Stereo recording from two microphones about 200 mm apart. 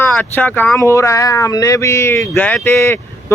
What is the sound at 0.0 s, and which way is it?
Speech, 10° left (ahead or behind).